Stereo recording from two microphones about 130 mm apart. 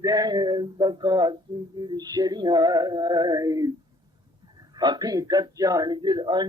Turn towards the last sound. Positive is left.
turn(degrees=-35)  # may be behind; listen again after turning